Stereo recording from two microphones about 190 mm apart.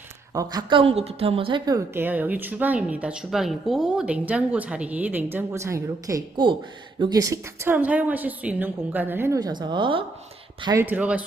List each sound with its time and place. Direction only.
0.3 s a woman's voice: 25° right (ahead or behind)
10.8 s a woman's voice: 10° right (ahead or behind)